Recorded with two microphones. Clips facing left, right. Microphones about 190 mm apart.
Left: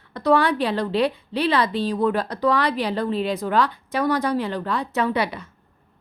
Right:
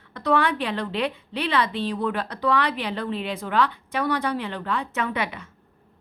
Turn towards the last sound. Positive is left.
turn(degrees=35)  # may be behind; listen again after turning